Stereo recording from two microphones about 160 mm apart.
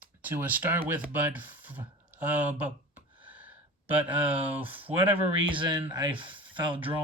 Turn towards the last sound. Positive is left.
turn(degrees=-30)  # may be behind; listen again after turning